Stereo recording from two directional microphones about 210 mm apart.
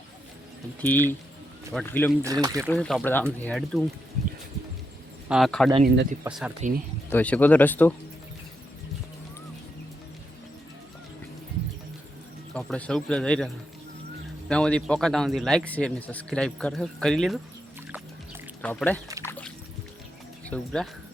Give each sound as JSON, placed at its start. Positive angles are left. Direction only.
{"t": 0.8, "sound": "speech", "side_deg": 5}
{"t": 2.2, "sound": "speech", "side_deg": -15}
{"t": 2.6, "sound": "a man's voice", "side_deg": 5}
{"t": 5.3, "sound": "a man's voice", "side_deg": 0}
{"t": 5.8, "sound": "speech", "side_deg": -40}
{"t": 6.2, "sound": "a man's voice", "side_deg": -5}
{"t": 7.1, "sound": "speech", "side_deg": 5}
{"t": 12.5, "sound": "a man's voice", "side_deg": 5}
{"t": 14.5, "sound": "a man's voice", "side_deg": 5}
{"t": 18.6, "sound": "speech", "side_deg": 5}
{"t": 19.2, "sound": "music", "side_deg": 10}